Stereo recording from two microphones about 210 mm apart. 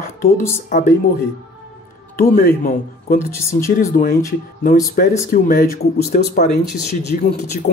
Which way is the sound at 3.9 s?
40° left (ahead or behind).